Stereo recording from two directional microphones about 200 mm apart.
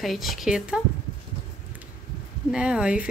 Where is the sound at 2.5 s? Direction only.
5° right (ahead or behind).